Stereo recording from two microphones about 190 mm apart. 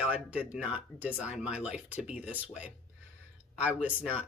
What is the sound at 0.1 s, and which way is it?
Speech, 10° right (ahead or behind).